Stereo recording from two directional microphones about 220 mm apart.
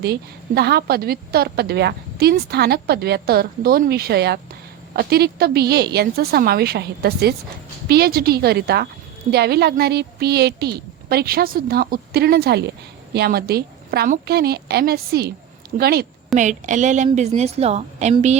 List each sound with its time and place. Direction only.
0.0 s a woman's voice: 45° right (ahead or behind)
16.3 s a woman's voice: 35° right (ahead or behind)